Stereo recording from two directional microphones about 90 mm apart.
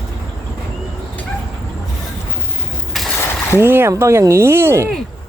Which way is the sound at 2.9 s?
Centre (ahead or behind).